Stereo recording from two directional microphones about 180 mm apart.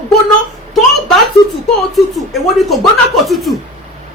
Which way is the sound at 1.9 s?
Centre (ahead or behind).